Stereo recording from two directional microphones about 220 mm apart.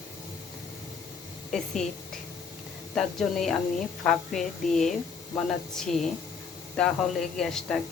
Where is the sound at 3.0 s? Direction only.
Centre (ahead or behind).